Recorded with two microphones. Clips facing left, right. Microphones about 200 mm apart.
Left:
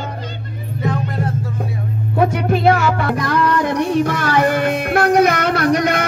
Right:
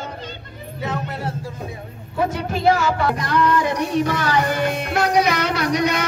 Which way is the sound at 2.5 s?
60° left (ahead or behind).